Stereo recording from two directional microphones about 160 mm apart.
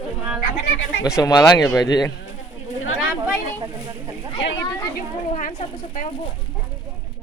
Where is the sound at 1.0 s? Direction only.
20° left (ahead or behind).